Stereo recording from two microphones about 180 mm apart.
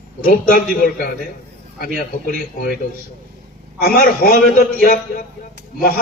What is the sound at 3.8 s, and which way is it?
Speech, 50° left (ahead or behind).